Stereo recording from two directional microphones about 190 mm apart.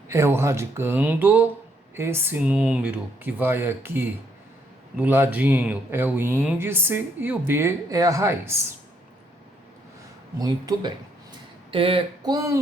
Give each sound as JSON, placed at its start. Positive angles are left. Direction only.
{"t": 0.1, "sound": "speech", "side_deg": -15}
{"t": 10.3, "sound": "speech", "side_deg": -20}